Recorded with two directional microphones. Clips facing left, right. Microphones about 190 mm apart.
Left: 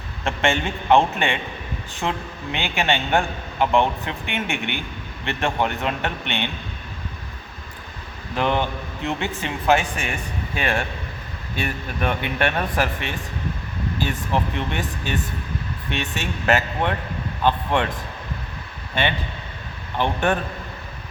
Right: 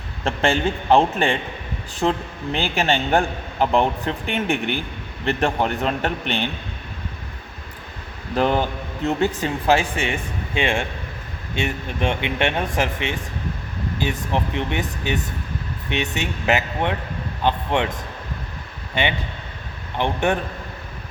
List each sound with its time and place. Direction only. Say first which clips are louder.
0.3 s a man's voice: right 2 dB; 35° right (ahead or behind)
8.4 s a man's voice: right 2 dB; 40° right (ahead or behind); by 17.8 s 15° right (ahead or behind)
20.0 s speech: right 1 dB; 15° right (ahead or behind)